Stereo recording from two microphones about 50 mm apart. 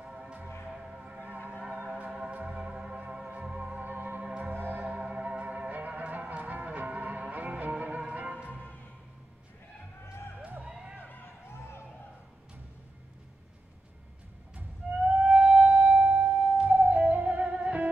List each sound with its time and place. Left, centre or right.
0.0 s music: right
1.1 s a sound: right
2.0 s music: centre
3.8 s music: right
4.2 s music: right
4.6 s church bell: right
4.8 s music: right
8.5 s music: left
10.6 s a sound: centre
11.4 s a sound: left
15.0 s music: right